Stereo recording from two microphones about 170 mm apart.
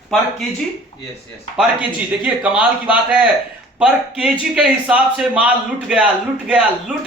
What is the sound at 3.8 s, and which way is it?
A man's voice, 5° right (ahead or behind).